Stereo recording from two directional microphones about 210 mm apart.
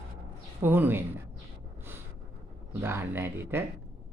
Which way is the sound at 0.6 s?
10° right (ahead or behind).